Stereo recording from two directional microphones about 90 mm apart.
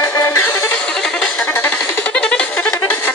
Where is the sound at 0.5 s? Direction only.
35° left (ahead or behind).